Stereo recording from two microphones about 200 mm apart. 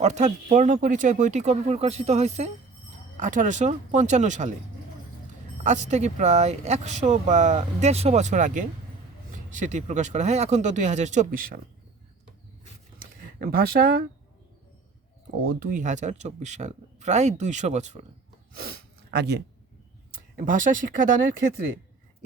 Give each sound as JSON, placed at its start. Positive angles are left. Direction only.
{"t": 0.0, "sound": "speech", "side_deg": -35}
{"t": 5.6, "sound": "speech", "side_deg": -35}
{"t": 13.0, "sound": "a sound", "side_deg": -50}
{"t": 15.4, "sound": "speech", "side_deg": -40}
{"t": 18.5, "sound": "speech", "side_deg": -50}
{"t": 20.1, "sound": "speech", "side_deg": -45}